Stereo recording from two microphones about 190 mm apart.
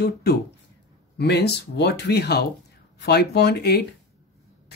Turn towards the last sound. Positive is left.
turn(degrees=60)  # may be behind; listen again after turning